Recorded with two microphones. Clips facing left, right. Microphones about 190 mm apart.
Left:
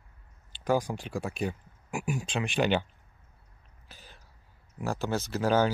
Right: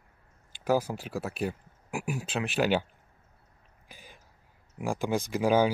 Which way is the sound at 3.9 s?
10° right (ahead or behind).